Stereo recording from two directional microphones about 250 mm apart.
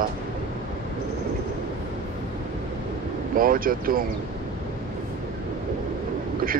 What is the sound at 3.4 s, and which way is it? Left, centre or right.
Speech, right.